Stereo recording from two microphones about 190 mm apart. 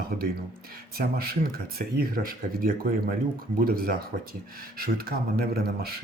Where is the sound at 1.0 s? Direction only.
55° right (ahead or behind).